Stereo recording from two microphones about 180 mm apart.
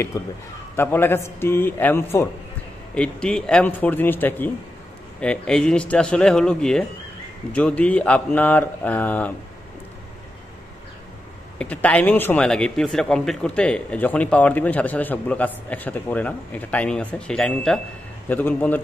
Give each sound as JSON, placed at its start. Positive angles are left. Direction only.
{"t": 0.1, "sound": "speech", "side_deg": 15}
{"t": 11.5, "sound": "speech", "side_deg": 10}